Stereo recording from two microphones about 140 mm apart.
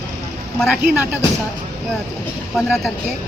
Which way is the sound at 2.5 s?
5° right (ahead or behind).